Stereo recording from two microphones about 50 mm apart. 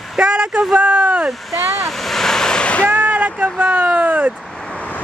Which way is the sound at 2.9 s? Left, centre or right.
Right.